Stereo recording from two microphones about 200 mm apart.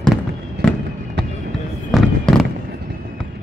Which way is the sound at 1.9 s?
Centre (ahead or behind).